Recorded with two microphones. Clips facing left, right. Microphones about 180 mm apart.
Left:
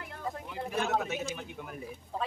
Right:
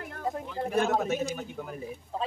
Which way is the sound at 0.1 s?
45° right (ahead or behind).